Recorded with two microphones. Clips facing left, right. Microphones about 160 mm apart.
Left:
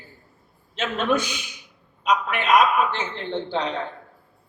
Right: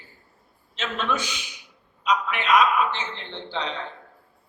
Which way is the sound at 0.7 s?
50° left (ahead or behind).